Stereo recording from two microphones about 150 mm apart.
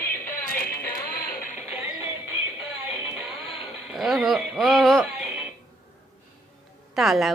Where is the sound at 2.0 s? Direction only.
15° right (ahead or behind).